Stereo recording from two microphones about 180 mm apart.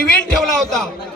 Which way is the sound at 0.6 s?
Centre (ahead or behind).